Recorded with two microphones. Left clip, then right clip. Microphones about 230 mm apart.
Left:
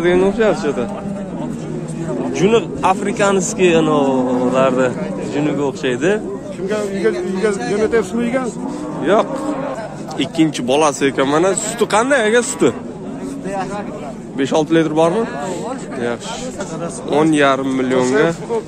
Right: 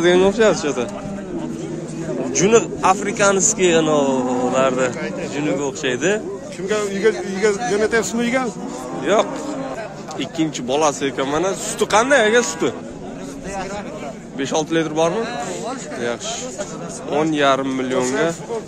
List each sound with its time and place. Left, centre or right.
0.0 s speech: right
2.3 s a man's voice: centre
6.7 s a sound: right
7.7 s a man's voice: right
9.0 s a man's voice: centre
14.4 s a man's voice: centre
17.1 s a man's voice: centre